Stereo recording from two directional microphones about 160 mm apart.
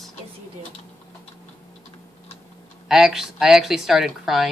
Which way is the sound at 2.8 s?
5° right (ahead or behind).